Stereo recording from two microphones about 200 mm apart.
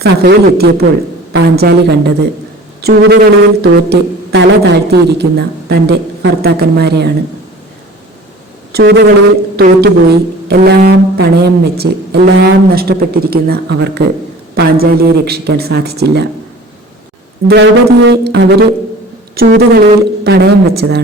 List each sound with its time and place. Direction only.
0.0 s a man's voice: 55° right (ahead or behind)
8.7 s a man's voice: 55° right (ahead or behind)
17.5 s a man's voice: 60° right (ahead or behind)